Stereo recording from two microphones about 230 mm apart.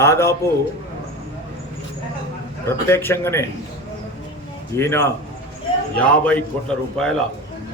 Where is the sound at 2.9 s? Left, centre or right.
Centre.